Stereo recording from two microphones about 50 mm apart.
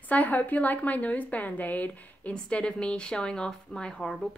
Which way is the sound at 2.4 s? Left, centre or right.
Left.